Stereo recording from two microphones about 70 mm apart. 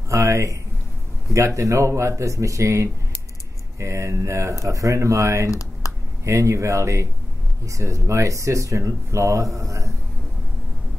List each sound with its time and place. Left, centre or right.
0.1 s speech: right
5.5 s computer keyboard: left
6.2 s speech: right